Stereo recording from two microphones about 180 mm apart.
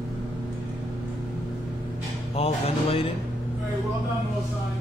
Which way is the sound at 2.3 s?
35° left (ahead or behind).